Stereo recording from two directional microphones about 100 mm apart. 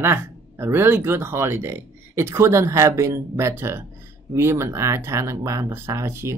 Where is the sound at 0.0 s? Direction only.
25° right (ahead or behind).